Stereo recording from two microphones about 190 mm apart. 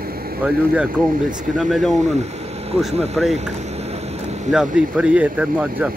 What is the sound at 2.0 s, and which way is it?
Speech, 35° right (ahead or behind).